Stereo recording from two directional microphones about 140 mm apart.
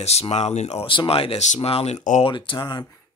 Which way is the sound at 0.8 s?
40° left (ahead or behind).